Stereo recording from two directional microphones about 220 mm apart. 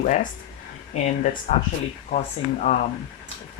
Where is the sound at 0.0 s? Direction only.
35° left (ahead or behind).